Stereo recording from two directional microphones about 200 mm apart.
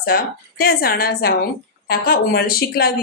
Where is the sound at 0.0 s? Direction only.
50° left (ahead or behind).